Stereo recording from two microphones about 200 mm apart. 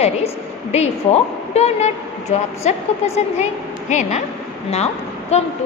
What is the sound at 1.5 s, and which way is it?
A woman's voice, 35° left (ahead or behind).